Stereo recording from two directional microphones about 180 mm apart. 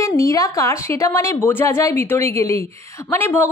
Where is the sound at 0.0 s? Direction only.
15° left (ahead or behind).